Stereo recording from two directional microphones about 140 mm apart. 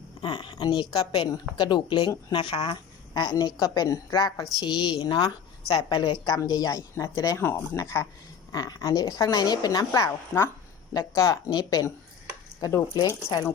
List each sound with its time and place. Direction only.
0.2 s a woman's voice: 30° left (ahead or behind)